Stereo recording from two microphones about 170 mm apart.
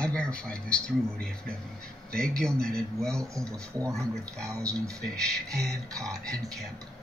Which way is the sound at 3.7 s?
20° right (ahead or behind).